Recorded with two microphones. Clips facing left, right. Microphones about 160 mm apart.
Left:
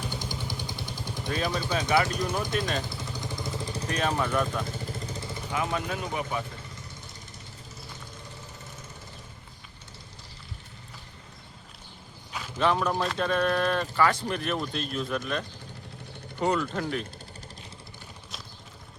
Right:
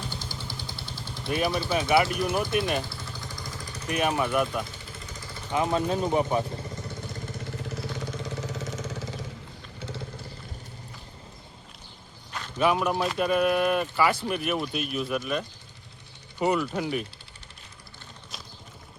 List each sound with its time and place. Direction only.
0.1 s vehicle: 15° left (ahead or behind)
1.3 s speech: 10° right (ahead or behind)
2.9 s vehicle: 20° left (ahead or behind)
3.8 s speech: 10° right (ahead or behind)
5.5 s speech: 25° right (ahead or behind)
7.5 s vehicle: 75° right (ahead or behind); by 9.2 s 90° right
12.5 s speech: 10° right (ahead or behind)